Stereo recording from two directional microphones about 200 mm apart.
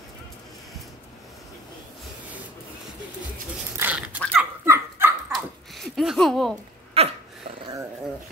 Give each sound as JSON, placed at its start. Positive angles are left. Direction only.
{"t": 3.7, "sound": "dog", "side_deg": -10}
{"t": 5.9, "sound": "speech", "side_deg": 0}
{"t": 7.0, "sound": "dog", "side_deg": -30}